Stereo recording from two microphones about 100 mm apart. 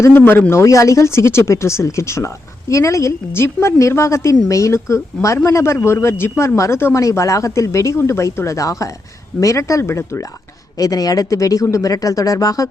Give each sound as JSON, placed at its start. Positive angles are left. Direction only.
{"t": 0.0, "sound": "speech", "side_deg": 20}